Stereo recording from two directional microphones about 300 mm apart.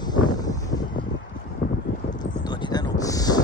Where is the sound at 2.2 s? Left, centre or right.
Centre.